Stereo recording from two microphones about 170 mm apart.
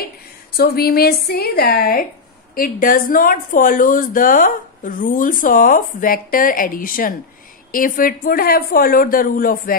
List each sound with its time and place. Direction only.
0.5 s a woman's voice: 65° left (ahead or behind)